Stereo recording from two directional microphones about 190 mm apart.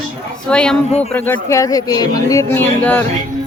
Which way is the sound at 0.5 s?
5° left (ahead or behind).